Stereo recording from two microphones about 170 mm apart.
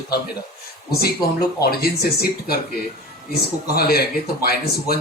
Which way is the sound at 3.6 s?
65° left (ahead or behind).